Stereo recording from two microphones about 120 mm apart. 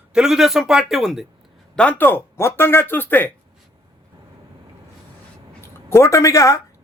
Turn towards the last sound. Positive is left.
turn(degrees=25)  # may be behind; listen again after turning